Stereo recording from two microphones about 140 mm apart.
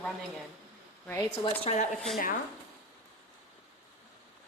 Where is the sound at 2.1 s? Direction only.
90° left.